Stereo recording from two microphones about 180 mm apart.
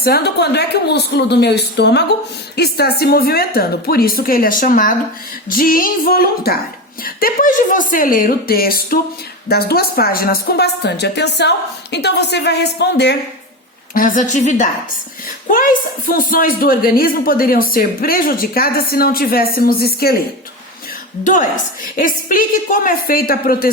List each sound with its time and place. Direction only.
0.0 s a woman's voice: 65° left (ahead or behind)
13.9 s a woman's voice: 50° left (ahead or behind)
16.0 s speech: 50° left (ahead or behind)
21.2 s a woman's voice: 45° left (ahead or behind)